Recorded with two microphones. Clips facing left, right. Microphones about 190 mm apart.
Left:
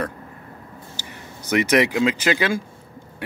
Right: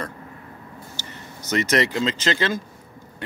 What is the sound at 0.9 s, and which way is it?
Speech, 10° left (ahead or behind).